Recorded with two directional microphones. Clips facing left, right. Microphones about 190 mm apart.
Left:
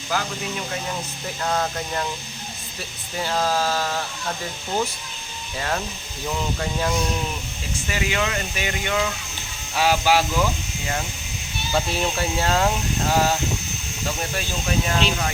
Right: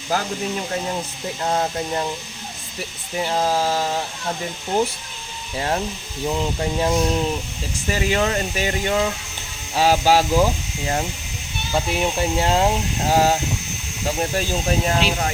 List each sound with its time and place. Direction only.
0.1 s speech: 40° right (ahead or behind)
1.4 s speech: 25° right (ahead or behind)
3.2 s speech: 20° right (ahead or behind)
5.5 s speech: 25° right (ahead or behind)
7.9 s speech: 40° right (ahead or behind)
11.7 s speech: 15° right (ahead or behind)
13.1 s speech: 40° right (ahead or behind)